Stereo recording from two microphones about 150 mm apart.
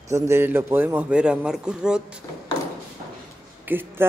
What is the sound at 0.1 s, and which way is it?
Speech, 15° right (ahead or behind).